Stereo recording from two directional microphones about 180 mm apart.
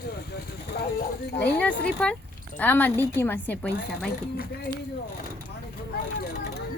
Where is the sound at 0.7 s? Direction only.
65° left (ahead or behind).